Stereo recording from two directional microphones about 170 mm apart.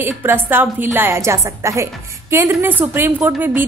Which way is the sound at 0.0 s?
15° right (ahead or behind).